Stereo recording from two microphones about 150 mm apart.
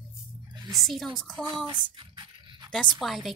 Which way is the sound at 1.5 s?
30° right (ahead or behind).